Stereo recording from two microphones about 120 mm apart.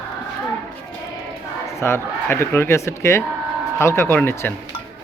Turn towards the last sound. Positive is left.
turn(degrees=20)  # may be behind; listen again after turning